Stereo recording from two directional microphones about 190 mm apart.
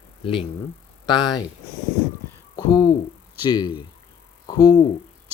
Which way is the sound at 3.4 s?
20° left (ahead or behind).